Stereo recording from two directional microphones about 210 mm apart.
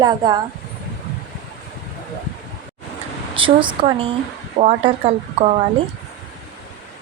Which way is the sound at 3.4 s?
25° right (ahead or behind).